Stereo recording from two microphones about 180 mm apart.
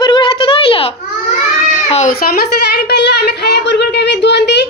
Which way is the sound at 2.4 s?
65° left (ahead or behind).